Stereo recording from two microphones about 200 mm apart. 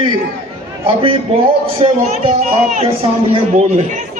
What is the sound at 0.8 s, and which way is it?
A man's voice, 25° right (ahead or behind).